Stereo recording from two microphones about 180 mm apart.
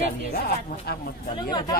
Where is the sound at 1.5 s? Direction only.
25° left (ahead or behind).